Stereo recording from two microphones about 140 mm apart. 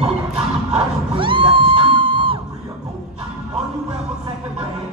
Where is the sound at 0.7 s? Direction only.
40° right (ahead or behind).